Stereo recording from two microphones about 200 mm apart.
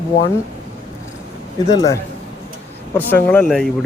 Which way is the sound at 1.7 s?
20° left (ahead or behind).